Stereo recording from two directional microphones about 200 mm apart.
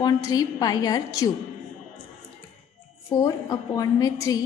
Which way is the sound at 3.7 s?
20° left (ahead or behind).